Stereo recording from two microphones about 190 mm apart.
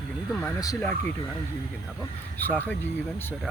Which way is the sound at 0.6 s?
15° left (ahead or behind).